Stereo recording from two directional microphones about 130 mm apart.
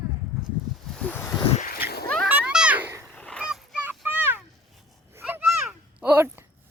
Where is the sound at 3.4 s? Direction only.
5° right (ahead or behind).